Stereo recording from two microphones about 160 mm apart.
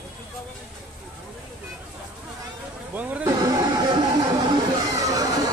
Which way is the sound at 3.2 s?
25° right (ahead or behind).